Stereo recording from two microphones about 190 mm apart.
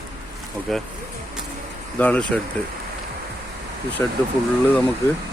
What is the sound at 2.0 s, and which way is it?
Speech, 5° left (ahead or behind).